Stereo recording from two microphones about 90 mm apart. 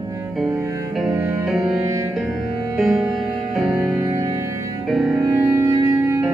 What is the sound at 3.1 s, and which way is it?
Music, centre (ahead or behind).